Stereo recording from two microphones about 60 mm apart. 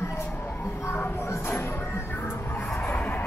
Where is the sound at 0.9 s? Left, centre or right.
Left.